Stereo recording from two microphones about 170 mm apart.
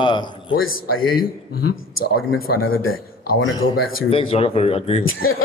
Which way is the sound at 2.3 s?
60° left (ahead or behind).